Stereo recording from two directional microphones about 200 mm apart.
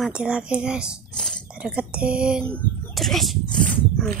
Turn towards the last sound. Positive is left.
turn(degrees=5)  # may be behind; listen again after turning